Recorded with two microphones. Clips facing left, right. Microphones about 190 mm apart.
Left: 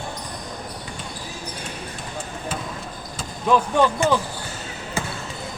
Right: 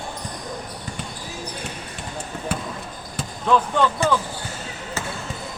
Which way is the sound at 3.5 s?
15° left (ahead or behind).